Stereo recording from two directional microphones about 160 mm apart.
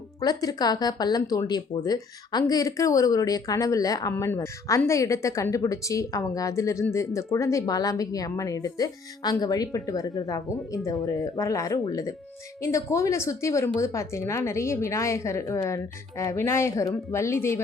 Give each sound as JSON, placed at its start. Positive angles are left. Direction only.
{"t": 0.2, "sound": "a woman's voice", "side_deg": 25}